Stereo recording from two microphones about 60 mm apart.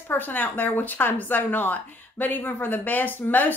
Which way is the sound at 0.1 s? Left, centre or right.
Left.